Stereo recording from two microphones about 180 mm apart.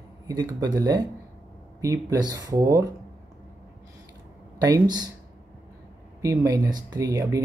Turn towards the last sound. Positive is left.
turn(degrees=-20)  # may be behind; listen again after turning